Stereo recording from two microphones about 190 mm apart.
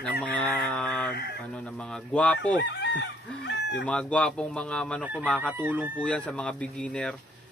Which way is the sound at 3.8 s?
5° left (ahead or behind).